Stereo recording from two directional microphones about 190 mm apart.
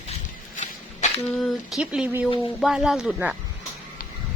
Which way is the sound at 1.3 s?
Centre (ahead or behind).